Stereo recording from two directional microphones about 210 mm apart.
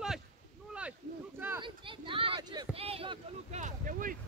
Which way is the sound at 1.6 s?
25° right (ahead or behind).